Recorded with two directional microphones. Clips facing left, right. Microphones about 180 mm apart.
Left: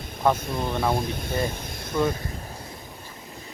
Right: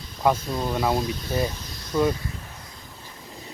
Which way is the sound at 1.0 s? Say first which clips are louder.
Right 1 dB; 55° left (ahead or behind).